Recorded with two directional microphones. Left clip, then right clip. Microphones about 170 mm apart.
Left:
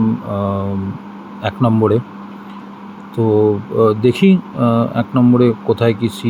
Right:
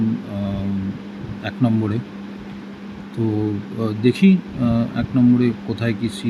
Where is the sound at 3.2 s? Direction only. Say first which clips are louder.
Left 10 dB; 15° left (ahead or behind).